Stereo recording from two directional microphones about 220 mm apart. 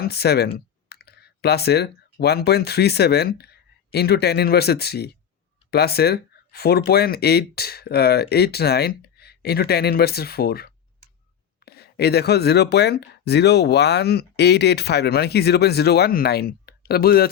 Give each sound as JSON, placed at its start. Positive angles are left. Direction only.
{"t": 0.0, "sound": "speech", "side_deg": 45}